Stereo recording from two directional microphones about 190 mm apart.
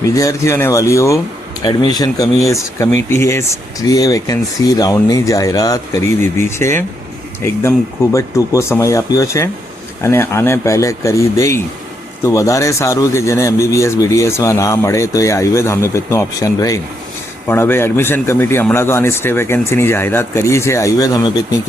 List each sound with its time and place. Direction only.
0.0 s a man's voice: 15° left (ahead or behind)